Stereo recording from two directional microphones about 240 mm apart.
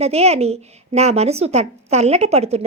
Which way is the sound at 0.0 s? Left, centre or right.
Right.